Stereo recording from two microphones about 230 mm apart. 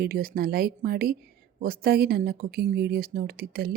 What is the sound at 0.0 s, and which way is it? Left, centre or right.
Speech, right.